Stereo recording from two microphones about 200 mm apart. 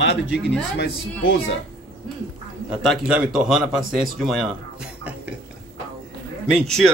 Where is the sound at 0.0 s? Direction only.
60° left (ahead or behind).